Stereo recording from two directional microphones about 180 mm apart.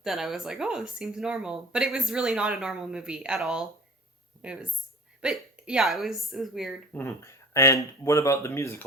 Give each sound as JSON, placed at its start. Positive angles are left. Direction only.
{"t": 0.0, "sound": "speech", "side_deg": 0}
{"t": 6.9, "sound": "speech", "side_deg": 15}